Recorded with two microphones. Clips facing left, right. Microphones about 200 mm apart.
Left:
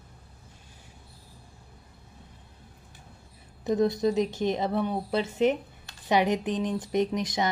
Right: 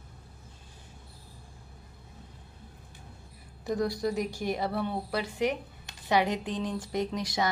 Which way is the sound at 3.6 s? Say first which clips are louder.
Left 5 dB; 20° left (ahead or behind).